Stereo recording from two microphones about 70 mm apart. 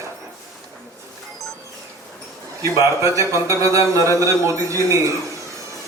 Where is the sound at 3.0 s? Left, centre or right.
Right.